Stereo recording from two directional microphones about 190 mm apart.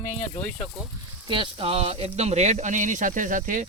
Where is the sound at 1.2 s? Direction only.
25° right (ahead or behind).